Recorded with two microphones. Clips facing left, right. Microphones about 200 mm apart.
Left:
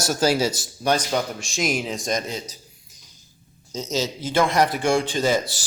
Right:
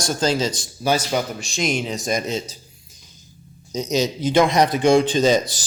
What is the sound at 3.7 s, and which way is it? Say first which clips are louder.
A man's voice: right 5 dB; 15° right (ahead or behind).